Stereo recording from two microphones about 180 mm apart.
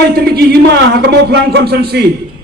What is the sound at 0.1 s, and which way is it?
A man's voice, 60° right (ahead or behind).